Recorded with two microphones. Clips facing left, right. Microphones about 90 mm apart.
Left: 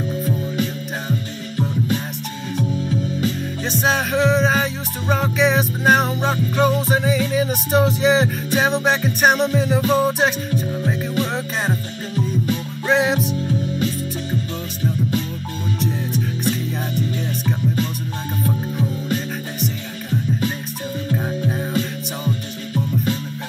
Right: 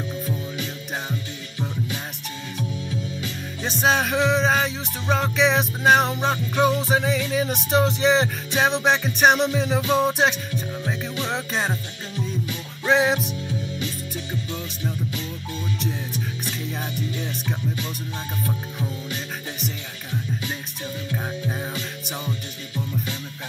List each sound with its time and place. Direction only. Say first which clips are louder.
2.9 s music: left 8 dB; 40° left (ahead or behind)
3.6 s music: even; centre (ahead or behind)
12.8 s music: left 1 dB; centre (ahead or behind)
15.8 s music: left 6 dB; centre (ahead or behind)
21.3 s music: left 6 dB; centre (ahead or behind)